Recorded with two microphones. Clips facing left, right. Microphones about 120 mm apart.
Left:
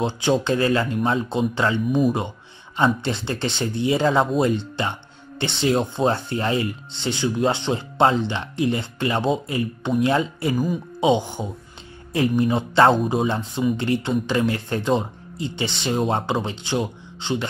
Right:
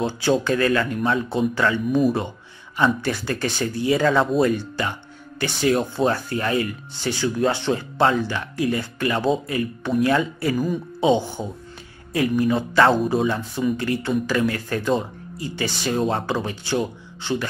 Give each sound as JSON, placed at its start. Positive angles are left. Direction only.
{"t": 0.0, "sound": "speech", "side_deg": 20}